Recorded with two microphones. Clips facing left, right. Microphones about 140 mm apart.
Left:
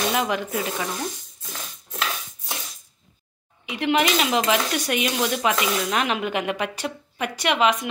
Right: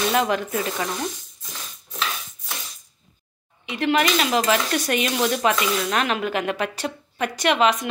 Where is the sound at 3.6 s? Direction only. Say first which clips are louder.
Right 1 dB; 15° left (ahead or behind).